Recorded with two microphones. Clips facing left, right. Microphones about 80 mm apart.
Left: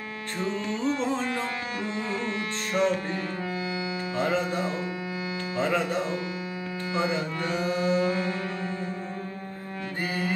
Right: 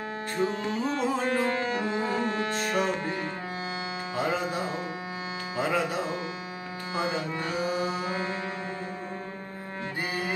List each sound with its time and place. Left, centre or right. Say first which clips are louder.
0.8 s music: left 2 dB; centre
1.7 s music: right 3 dB; right
4.2 s music: left 2 dB; centre
8.0 s music: left 4 dB; right